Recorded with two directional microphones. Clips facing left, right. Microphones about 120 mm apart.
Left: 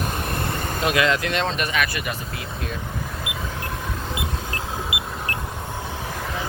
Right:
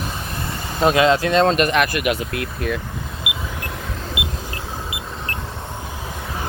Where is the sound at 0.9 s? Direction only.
25° right (ahead or behind).